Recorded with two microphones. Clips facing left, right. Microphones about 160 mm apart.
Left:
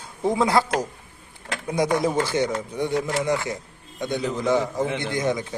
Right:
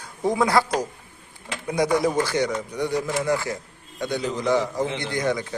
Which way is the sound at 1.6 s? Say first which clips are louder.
Right 1 dB; 25° left (ahead or behind).